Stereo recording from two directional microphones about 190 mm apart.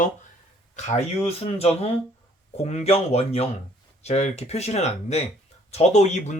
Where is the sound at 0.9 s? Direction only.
35° left (ahead or behind).